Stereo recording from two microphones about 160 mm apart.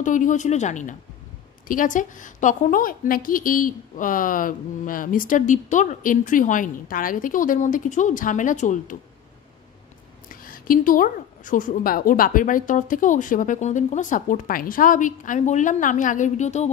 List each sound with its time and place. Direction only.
0.0 s a woman's voice: 50° left (ahead or behind)
10.3 s a woman's voice: 60° left (ahead or behind)